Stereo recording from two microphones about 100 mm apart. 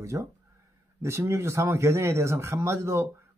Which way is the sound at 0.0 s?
30° right (ahead or behind).